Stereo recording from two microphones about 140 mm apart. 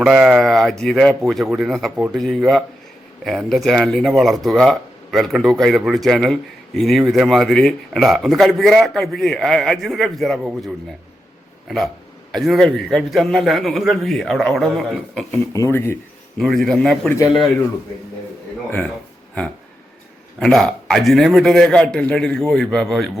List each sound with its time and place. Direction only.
0.0 s speech: centre (ahead or behind)
12.3 s speech: centre (ahead or behind)
15.5 s speech: 20° left (ahead or behind)
16.4 s speech: centre (ahead or behind)
20.4 s speech: 5° left (ahead or behind)